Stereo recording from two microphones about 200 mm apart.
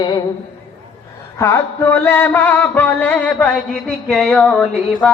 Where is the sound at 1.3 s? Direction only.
15° left (ahead or behind).